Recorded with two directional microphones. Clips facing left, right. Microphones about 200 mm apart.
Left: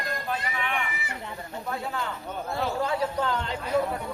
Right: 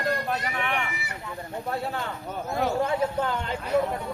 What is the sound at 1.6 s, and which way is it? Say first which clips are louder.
Speech: right 2 dB; 35° right (ahead or behind).